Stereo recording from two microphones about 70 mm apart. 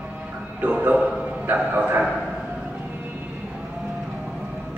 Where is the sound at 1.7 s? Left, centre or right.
Right.